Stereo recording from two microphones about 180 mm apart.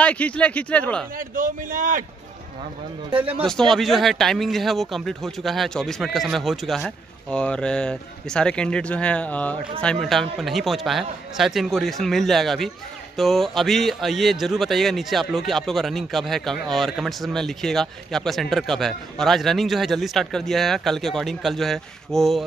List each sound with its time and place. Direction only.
0.0 s speech: 10° left (ahead or behind)
1.1 s speech: 50° right (ahead or behind)
3.1 s speech: 30° right (ahead or behind)
3.4 s speech: centre (ahead or behind)